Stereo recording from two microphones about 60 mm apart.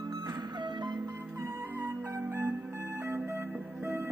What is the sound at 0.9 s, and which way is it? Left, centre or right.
Music, right.